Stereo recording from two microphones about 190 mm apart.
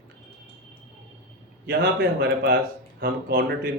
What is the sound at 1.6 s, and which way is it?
Speech, 55° right (ahead or behind).